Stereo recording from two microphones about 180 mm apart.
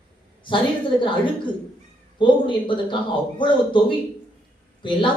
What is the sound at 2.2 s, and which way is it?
A man's voice, 25° left (ahead or behind).